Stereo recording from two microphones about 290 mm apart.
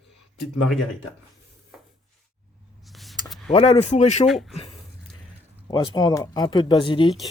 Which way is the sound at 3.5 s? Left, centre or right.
Left.